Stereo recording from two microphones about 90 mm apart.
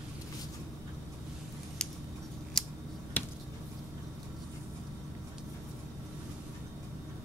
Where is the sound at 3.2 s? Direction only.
20° left (ahead or behind).